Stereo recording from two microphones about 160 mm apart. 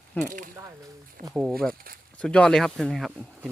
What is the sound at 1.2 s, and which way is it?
Speech, 65° right (ahead or behind).